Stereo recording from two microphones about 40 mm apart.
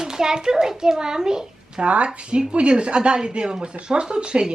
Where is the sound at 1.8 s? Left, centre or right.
Right.